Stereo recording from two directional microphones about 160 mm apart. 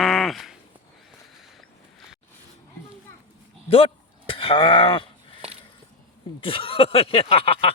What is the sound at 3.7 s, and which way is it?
Speech, 35° left (ahead or behind).